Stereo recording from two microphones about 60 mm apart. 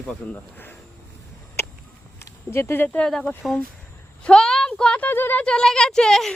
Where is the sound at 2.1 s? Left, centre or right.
Left.